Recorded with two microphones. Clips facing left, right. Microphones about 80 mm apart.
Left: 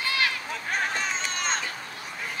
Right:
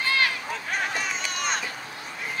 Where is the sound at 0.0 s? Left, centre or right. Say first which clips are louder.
Right 3 dB; right.